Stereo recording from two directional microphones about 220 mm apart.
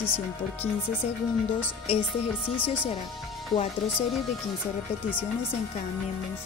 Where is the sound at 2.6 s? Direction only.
20° left (ahead or behind).